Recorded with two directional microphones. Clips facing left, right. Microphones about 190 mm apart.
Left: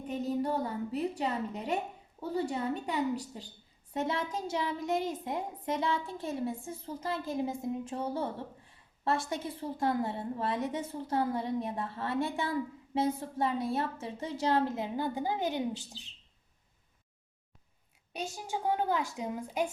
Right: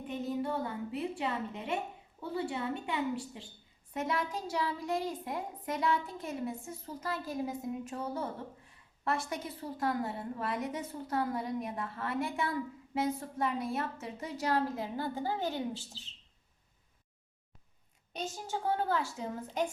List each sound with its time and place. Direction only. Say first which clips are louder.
0.1 s a woman's voice: left 3 dB; 40° left (ahead or behind)
3.9 s a woman's voice: left 1 dB; 30° left (ahead or behind)
9.3 s a woman's voice: left 3 dB; 25° left (ahead or behind)
18.1 s a woman's voice: left 1 dB; 10° left (ahead or behind)